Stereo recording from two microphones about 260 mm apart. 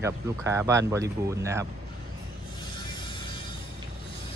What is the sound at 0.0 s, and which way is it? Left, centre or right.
Speech, centre.